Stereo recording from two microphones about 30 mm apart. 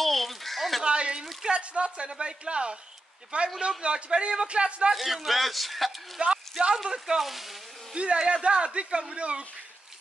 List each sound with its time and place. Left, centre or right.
0.0 s a sound: centre
0.8 s a sound: right
1.4 s a man's voice: right
3.6 s a man's voice: right
4.9 s speech: centre
6.2 s a man's voice: right
6.7 s speech: centre
7.2 s speech: centre
7.9 s a man's voice: right